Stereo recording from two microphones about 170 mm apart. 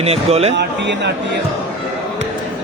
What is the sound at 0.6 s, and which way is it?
Speech, 90° right.